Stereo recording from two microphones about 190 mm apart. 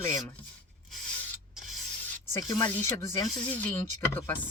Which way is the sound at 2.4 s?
10° left (ahead or behind).